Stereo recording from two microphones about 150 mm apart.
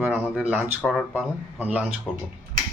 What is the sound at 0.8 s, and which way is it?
Speech, 5° left (ahead or behind).